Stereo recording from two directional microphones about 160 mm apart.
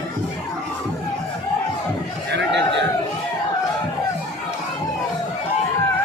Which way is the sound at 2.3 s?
90° right.